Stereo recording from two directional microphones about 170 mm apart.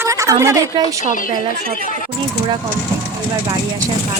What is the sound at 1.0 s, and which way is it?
Speech, 50° left (ahead or behind).